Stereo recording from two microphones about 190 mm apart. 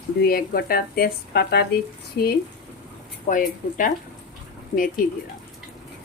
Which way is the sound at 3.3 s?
45° left (ahead or behind).